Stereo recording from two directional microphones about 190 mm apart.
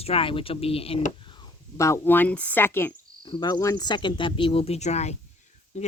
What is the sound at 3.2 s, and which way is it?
Speech, 20° left (ahead or behind).